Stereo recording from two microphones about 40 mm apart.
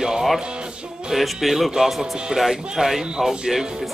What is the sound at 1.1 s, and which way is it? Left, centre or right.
Music, centre.